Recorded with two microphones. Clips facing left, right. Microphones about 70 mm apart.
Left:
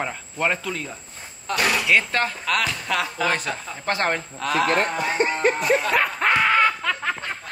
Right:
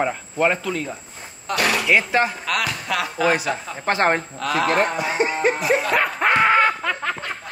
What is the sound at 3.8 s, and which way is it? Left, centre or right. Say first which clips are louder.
Speech: right 4 dB; right.